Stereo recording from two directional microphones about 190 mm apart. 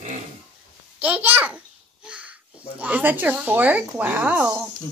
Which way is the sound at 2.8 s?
10° right (ahead or behind).